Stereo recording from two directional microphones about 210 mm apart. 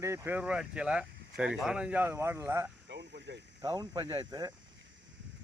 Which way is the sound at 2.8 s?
55° right (ahead or behind).